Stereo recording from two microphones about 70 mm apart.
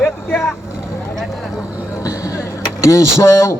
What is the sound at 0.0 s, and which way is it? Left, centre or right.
Vehicle, left.